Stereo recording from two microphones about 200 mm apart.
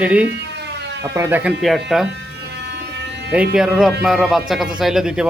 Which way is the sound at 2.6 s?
60° right (ahead or behind).